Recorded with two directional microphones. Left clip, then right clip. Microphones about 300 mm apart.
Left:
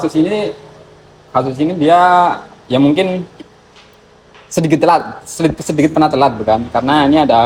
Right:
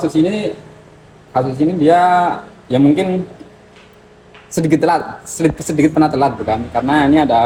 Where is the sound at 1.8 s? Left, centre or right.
Centre.